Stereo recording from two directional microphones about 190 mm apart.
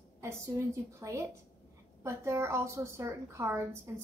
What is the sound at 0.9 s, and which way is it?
A woman's voice, 15° right (ahead or behind).